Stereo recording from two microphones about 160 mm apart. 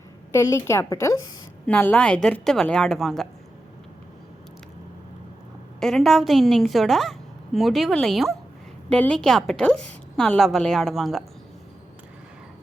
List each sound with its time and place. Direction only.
0.3 s a woman's voice: 15° left (ahead or behind)
5.8 s a woman's voice: centre (ahead or behind)